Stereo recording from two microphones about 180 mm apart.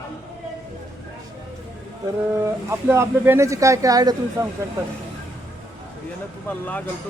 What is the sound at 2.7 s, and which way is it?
Speech, 15° right (ahead or behind).